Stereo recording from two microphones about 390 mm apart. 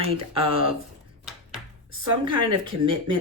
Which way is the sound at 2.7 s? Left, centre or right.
Right.